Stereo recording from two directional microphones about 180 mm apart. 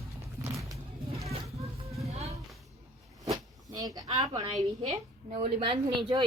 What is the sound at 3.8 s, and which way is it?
A woman's voice, 20° right (ahead or behind).